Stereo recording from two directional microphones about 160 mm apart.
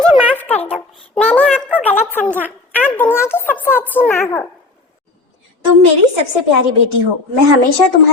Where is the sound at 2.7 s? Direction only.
10° left (ahead or behind).